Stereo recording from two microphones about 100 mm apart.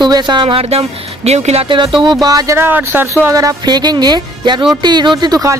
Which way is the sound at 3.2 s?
35° right (ahead or behind).